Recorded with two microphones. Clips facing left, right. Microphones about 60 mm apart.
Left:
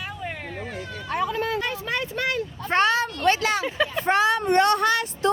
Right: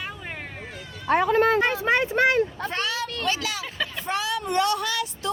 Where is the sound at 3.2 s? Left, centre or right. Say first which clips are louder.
Left 9 dB; left.